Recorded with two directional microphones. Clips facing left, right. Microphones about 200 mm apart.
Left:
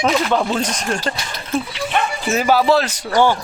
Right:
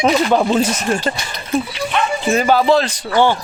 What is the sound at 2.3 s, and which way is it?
Speech, 5° left (ahead or behind).